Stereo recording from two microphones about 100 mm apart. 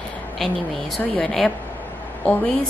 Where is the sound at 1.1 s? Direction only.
5° left (ahead or behind).